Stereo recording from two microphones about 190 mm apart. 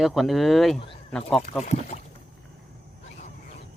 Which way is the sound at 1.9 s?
35° left (ahead or behind).